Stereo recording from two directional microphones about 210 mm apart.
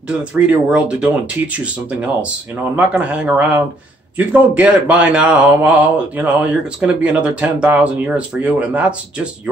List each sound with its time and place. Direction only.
0.2 s speech: 5° right (ahead or behind)